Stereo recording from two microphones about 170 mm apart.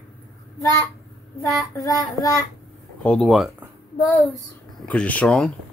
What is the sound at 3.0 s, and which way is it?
Speech, 5° left (ahead or behind).